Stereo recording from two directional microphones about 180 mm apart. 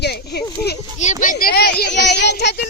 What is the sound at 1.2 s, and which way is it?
Speech, 50° left (ahead or behind).